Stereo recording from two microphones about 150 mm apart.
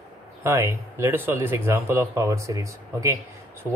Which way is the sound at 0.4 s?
20° right (ahead or behind).